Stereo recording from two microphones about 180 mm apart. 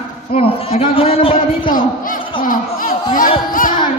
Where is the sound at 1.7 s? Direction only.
50° left (ahead or behind).